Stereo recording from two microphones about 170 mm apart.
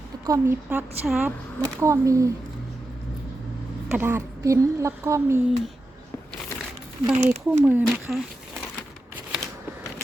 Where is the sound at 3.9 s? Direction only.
10° right (ahead or behind).